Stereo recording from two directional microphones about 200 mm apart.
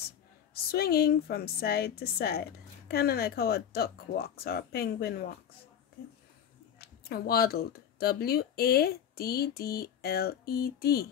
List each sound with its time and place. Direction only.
0.7 s a woman's voice: 50° left (ahead or behind)
6.8 s a woman's voice: 50° left (ahead or behind)